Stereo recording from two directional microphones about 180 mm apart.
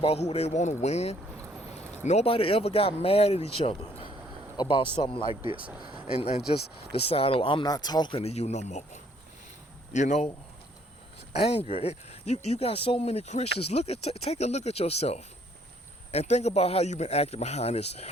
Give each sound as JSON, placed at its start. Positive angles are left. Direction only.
{"t": 0.0, "sound": "speech", "side_deg": 35}
{"t": 1.4, "sound": "vehicle", "side_deg": -10}
{"t": 2.0, "sound": "speech", "side_deg": 35}
{"t": 5.5, "sound": "speech", "side_deg": -5}
{"t": 6.1, "sound": "a man's voice", "side_deg": 35}
{"t": 11.3, "sound": "speech", "side_deg": 35}